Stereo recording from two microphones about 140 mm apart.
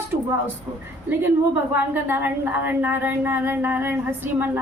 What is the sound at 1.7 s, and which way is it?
A woman's voice, 15° right (ahead or behind).